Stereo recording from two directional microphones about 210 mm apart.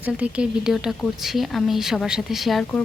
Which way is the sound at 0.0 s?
5° right (ahead or behind).